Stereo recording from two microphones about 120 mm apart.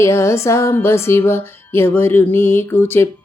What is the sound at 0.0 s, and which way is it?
Speech, 25° left (ahead or behind).